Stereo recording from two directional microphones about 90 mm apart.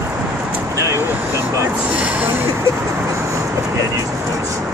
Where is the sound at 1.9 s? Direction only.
15° right (ahead or behind).